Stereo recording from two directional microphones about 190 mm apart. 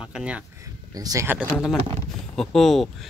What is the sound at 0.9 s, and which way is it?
Speech, 20° right (ahead or behind).